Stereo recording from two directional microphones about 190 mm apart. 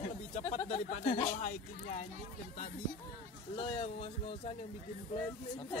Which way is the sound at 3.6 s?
30° left (ahead or behind).